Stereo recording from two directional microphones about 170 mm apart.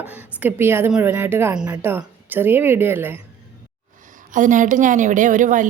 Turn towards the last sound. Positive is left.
turn(degrees=-50)  # may be behind; listen again after turning